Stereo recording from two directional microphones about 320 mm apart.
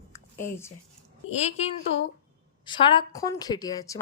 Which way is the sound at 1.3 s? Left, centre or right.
Centre.